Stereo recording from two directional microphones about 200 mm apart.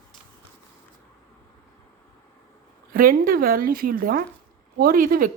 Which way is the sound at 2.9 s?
45° right (ahead or behind).